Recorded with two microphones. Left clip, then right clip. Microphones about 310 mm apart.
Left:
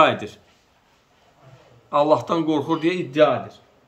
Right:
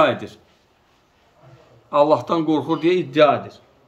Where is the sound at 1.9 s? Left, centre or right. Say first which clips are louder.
Right 2 dB; centre.